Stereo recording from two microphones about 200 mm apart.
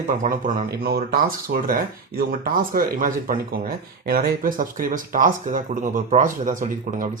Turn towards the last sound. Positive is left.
turn(degrees=-40)  # may be behind; listen again after turning